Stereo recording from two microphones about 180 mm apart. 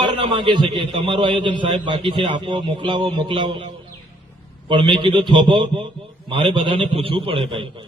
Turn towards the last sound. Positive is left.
turn(degrees=-30)  # may be behind; listen again after turning